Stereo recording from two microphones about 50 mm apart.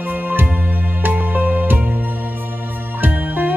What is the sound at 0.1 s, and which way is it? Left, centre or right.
Music, right.